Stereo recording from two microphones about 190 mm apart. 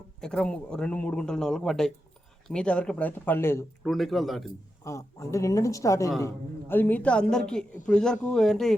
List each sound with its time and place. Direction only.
0.2 s a woman's voice: 5° left (ahead or behind)
3.8 s a woman's voice: centre (ahead or behind)
4.8 s a woman's voice: 15° left (ahead or behind)